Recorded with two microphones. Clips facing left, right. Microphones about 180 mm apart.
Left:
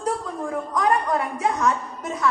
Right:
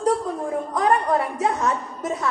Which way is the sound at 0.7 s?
30° right (ahead or behind).